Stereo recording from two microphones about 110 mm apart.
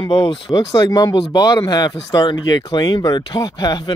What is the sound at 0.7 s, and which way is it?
Speech, 35° left (ahead or behind).